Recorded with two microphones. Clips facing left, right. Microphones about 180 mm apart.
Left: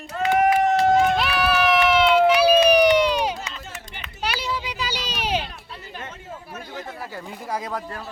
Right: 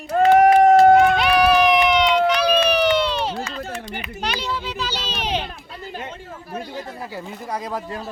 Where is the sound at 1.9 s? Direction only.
5° left (ahead or behind).